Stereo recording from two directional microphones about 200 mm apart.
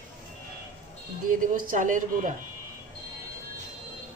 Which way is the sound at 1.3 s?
45° right (ahead or behind).